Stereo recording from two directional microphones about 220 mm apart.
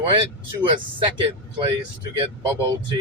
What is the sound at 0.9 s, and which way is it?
Speech, 20° right (ahead or behind).